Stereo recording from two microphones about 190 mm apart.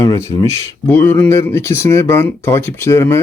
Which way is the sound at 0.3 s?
15° left (ahead or behind).